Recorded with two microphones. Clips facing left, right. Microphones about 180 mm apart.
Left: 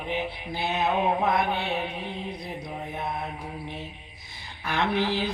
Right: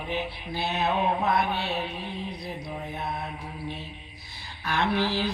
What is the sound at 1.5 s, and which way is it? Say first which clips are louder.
Speech: left 1 dB; 20° left (ahead or behind).